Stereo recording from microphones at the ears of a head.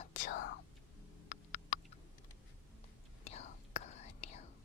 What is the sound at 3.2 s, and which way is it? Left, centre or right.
Whispering, left.